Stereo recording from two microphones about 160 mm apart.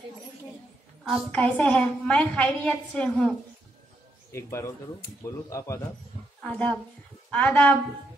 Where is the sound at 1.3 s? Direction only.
10° left (ahead or behind).